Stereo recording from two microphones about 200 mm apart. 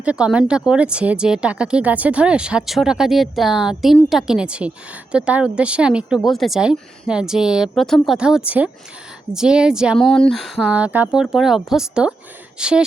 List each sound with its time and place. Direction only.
0.0 s speech: 5° right (ahead or behind)